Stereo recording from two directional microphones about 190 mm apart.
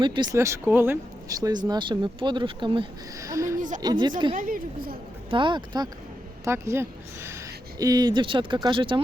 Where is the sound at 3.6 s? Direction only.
40° right (ahead or behind).